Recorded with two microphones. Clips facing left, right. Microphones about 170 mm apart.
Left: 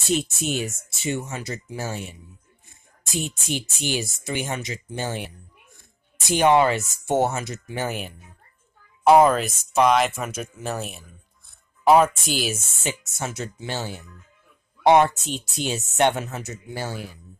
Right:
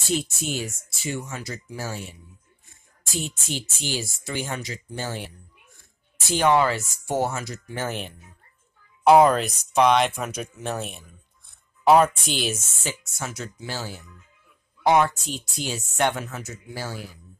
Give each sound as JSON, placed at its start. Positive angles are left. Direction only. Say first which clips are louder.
{"t": 0.1, "sound": "speech", "louder": "left 3 dB", "side_deg": 20}
{"t": 9.0, "sound": "speech", "louder": "even", "side_deg": 0}
{"t": 12.8, "sound": "speech", "louder": "left 4 dB", "side_deg": 25}